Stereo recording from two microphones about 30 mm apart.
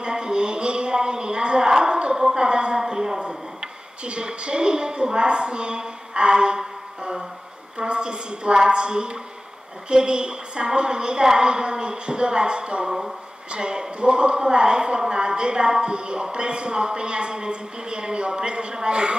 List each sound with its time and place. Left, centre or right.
0.0 s a sound: right
2.8 s a woman's voice: right
7.0 s music: right
7.7 s a woman's voice: right